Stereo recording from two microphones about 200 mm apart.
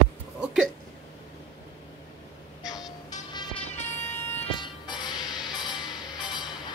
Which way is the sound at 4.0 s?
35° left (ahead or behind).